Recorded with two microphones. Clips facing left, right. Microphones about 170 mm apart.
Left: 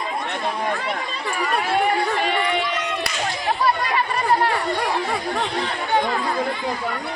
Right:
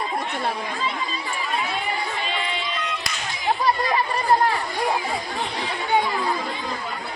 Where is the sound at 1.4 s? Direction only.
70° left (ahead or behind).